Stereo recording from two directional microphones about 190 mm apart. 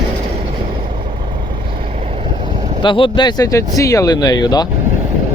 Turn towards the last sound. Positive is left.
turn(degrees=20)  # may be behind; listen again after turning